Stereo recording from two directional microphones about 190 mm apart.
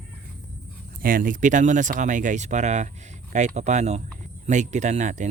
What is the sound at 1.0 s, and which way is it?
Speech, 45° right (ahead or behind).